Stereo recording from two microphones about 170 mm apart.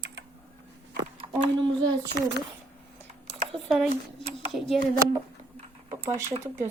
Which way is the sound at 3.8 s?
35° right (ahead or behind).